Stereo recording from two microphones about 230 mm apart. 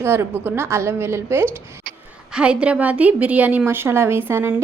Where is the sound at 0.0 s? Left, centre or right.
Centre.